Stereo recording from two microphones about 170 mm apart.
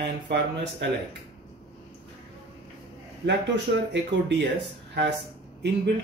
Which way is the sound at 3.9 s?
90° right.